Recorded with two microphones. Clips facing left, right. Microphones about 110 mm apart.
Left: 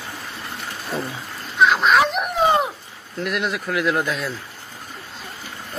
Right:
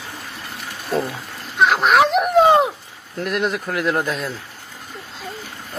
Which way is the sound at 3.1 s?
40° right (ahead or behind).